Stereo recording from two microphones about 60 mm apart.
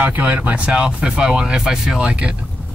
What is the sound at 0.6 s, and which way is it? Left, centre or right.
Speech, centre.